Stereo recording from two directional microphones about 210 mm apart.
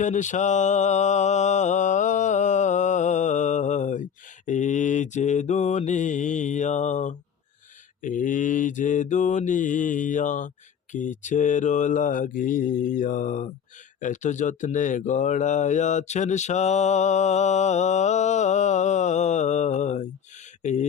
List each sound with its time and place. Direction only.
0.0 s mantra: 35° left (ahead or behind)
8.0 s speech: 40° left (ahead or behind)